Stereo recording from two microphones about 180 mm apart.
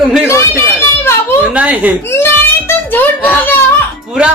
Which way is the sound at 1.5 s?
10° right (ahead or behind).